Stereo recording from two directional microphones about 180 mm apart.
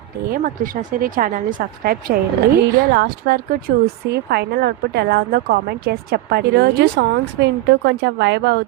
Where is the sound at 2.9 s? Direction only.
65° right (ahead or behind).